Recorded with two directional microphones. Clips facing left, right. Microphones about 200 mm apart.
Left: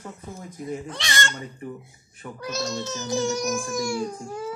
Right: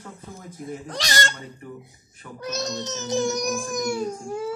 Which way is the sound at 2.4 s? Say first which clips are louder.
Even; 20° right (ahead or behind).